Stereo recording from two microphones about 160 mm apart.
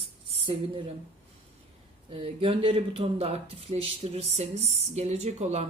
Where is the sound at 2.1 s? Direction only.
35° right (ahead or behind).